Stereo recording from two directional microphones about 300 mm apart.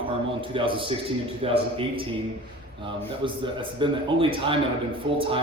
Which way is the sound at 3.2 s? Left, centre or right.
Centre.